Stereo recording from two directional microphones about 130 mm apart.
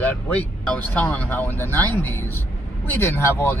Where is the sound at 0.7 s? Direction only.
15° left (ahead or behind).